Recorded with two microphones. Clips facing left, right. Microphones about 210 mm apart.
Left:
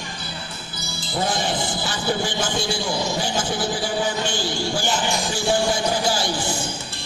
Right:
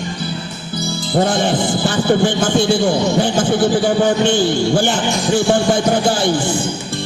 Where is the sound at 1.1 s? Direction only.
55° right (ahead or behind).